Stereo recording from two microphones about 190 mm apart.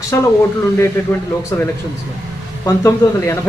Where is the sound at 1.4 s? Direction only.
15° left (ahead or behind).